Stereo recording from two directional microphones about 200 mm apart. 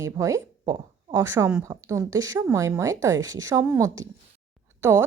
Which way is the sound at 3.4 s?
15° right (ahead or behind).